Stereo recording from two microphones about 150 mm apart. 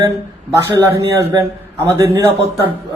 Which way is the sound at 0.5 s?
20° right (ahead or behind).